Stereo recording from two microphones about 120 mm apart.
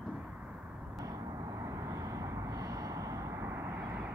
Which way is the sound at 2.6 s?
30° right (ahead or behind).